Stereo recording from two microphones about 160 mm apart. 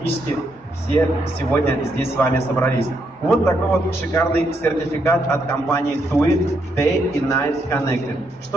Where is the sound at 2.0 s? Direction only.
15° left (ahead or behind).